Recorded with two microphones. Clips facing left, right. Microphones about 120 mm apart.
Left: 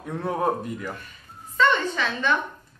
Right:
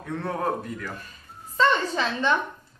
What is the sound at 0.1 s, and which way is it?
Speech, 15° left (ahead or behind).